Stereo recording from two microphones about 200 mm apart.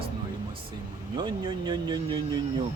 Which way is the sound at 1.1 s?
20° right (ahead or behind).